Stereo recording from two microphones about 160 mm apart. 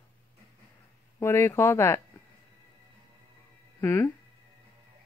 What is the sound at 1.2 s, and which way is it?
Speech, 15° left (ahead or behind).